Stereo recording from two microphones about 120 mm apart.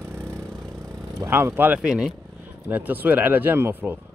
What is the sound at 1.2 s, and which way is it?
Speech, 20° right (ahead or behind).